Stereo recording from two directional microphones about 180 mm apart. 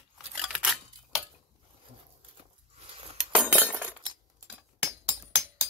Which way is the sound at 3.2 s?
5° right (ahead or behind).